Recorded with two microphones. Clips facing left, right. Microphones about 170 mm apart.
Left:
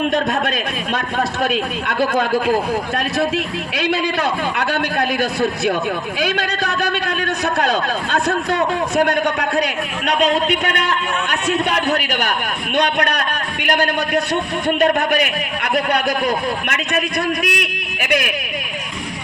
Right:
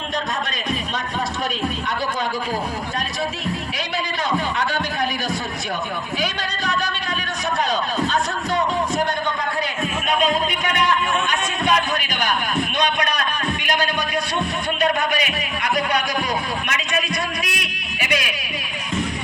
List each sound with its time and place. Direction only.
3.8 s a man's voice: 65° left (ahead or behind)
9.6 s a man's voice: 75° left (ahead or behind); by 17.0 s 60° left (ahead or behind)
17.4 s a sound: 55° left (ahead or behind)